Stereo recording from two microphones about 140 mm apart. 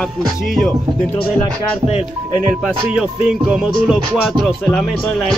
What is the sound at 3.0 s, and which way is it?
Music, centre (ahead or behind).